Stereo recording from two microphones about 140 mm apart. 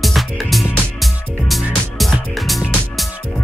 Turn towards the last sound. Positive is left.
turn(degrees=0)  # may be behind; listen again after turning